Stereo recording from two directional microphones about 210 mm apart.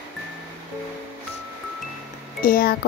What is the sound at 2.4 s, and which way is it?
Speech, 45° left (ahead or behind).